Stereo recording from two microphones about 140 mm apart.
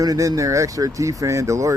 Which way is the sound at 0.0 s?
25° right (ahead or behind).